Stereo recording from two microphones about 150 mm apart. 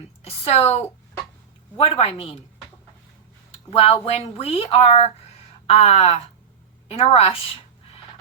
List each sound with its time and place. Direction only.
0.2 s a woman's voice: 40° left (ahead or behind)
2.0 s speech: 40° left (ahead or behind)
3.7 s speech: 40° left (ahead or behind)